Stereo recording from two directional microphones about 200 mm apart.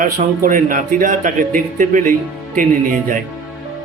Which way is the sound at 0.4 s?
40° right (ahead or behind).